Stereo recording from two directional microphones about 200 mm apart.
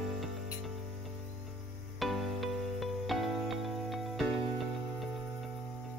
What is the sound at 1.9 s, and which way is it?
Music, centre (ahead or behind).